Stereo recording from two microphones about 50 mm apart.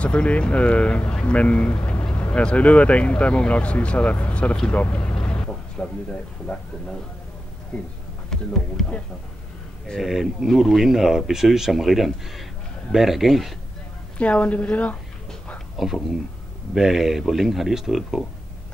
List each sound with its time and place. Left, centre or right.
0.0 s speech: left
4.6 s a sound: left
6.4 s speech: left
8.3 s speech: centre
10.0 s speech: centre
10.5 s speech: centre
14.1 s speech: left
15.8 s speech: centre